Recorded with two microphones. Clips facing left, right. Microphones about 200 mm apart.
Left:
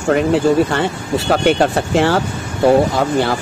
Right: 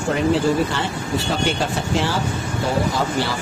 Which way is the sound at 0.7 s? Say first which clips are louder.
Left 6 dB; 60° left (ahead or behind).